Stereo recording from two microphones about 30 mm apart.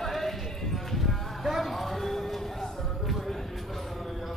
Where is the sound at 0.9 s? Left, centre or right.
Centre.